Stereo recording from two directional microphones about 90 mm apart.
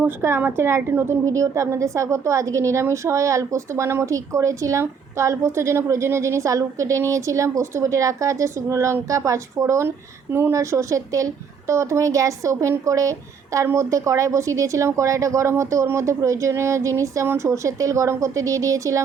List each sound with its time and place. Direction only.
0.2 s a woman's voice: 25° right (ahead or behind)